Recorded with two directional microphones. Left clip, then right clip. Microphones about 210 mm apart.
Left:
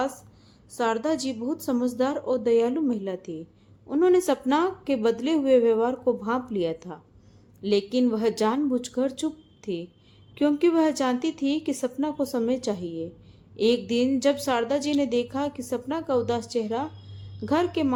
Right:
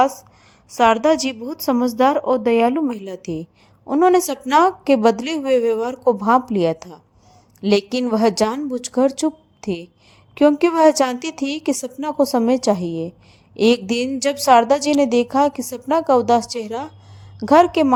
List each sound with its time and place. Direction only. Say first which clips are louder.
0.8 s a woman's voice: right 11 dB; 30° right (ahead or behind)